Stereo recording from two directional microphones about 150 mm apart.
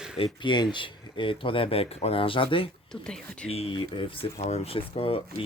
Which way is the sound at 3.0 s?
5° left (ahead or behind).